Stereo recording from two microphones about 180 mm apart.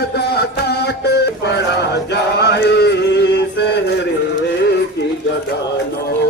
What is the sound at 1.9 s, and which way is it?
Chant, 70° left (ahead or behind).